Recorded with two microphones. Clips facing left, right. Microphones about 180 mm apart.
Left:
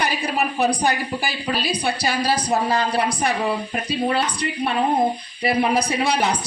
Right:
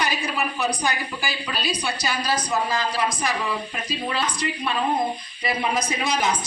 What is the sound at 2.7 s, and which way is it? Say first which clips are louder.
A woman's voice: left 4 dB; 60° left (ahead or behind).